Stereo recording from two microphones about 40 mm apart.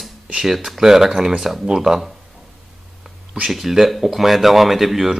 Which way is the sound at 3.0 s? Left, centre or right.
Centre.